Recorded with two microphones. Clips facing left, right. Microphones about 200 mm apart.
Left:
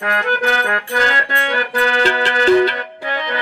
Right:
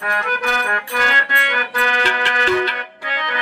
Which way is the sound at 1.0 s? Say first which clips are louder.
Left 3 dB; 40° left (ahead or behind).